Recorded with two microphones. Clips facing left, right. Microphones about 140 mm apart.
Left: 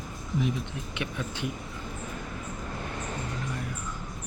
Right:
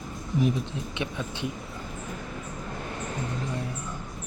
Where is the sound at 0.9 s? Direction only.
25° right (ahead or behind).